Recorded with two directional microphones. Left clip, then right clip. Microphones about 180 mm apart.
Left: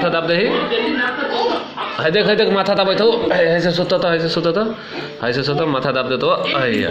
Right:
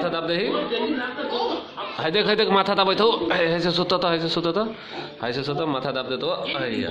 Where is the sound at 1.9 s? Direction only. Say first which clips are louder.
Left 6 dB; 5° right (ahead or behind).